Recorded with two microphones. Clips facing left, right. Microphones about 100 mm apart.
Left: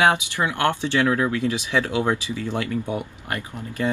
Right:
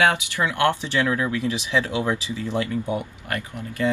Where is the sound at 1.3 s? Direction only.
20° right (ahead or behind).